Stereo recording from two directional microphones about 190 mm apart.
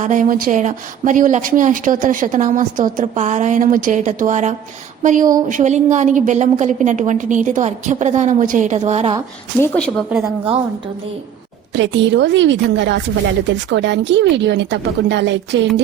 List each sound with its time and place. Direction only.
0.0 s speech: 45° right (ahead or behind)
9.6 s a woman's voice: 10° left (ahead or behind)
10.1 s a woman's voice: 15° right (ahead or behind)
11.7 s a woman's voice: 70° right (ahead or behind)